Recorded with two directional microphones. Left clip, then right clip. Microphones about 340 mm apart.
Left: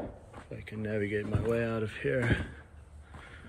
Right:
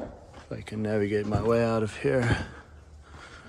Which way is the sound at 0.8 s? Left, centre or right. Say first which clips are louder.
Right 6 dB; centre.